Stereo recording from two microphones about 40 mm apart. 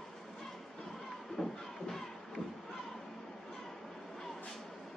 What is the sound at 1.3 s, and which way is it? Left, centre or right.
Music, centre.